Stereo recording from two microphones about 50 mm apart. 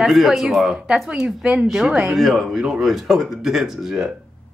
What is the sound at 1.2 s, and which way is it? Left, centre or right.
Speech, right.